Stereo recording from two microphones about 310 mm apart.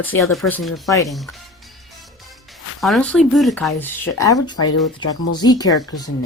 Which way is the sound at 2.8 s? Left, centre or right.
Centre.